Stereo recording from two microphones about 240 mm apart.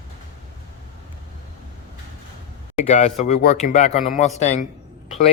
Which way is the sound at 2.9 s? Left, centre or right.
Left.